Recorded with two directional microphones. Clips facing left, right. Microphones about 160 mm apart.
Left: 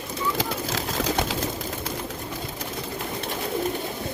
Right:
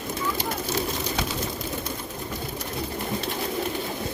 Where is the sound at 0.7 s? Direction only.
90° left.